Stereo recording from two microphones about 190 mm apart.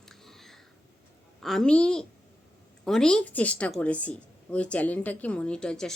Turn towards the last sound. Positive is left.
turn(degrees=5)  # may be behind; listen again after turning